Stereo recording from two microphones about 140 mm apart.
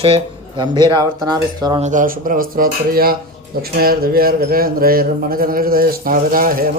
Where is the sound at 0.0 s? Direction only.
40° right (ahead or behind).